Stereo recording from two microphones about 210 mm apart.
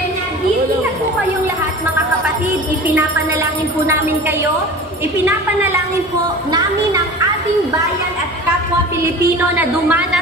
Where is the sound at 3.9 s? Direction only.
10° right (ahead or behind).